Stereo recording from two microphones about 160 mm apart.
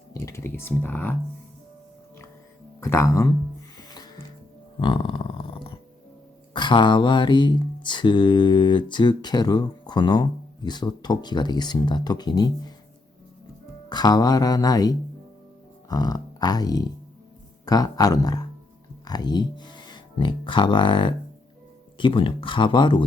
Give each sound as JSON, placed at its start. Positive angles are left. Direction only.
{"t": 0.1, "sound": "typing", "side_deg": 15}
{"t": 0.8, "sound": "speech", "side_deg": 10}
{"t": 2.8, "sound": "mantra", "side_deg": 20}
{"t": 3.8, "sound": "music", "side_deg": 25}
{"t": 4.8, "sound": "a sound", "side_deg": 30}
{"t": 6.5, "sound": "mantra", "side_deg": 30}
{"t": 13.9, "sound": "mantra", "side_deg": 25}
{"t": 19.0, "sound": "speech", "side_deg": 25}